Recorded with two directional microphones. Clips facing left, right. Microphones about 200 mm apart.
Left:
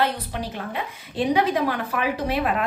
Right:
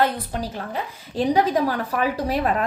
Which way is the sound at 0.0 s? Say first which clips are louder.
Right 2 dB; 40° right (ahead or behind).